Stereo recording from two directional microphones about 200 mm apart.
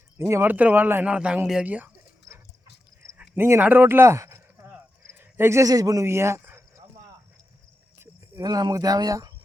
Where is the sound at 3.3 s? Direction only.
10° right (ahead or behind).